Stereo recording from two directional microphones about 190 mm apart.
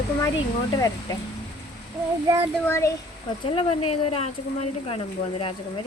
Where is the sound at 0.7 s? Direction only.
20° left (ahead or behind).